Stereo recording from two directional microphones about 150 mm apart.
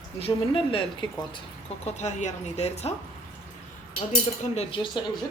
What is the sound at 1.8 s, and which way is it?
Speech, 50° left (ahead or behind).